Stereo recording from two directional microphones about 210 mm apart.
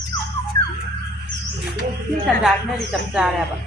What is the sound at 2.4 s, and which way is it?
Speech, centre (ahead or behind).